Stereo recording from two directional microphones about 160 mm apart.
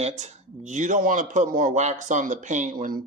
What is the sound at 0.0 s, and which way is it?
Speech, 45° right (ahead or behind).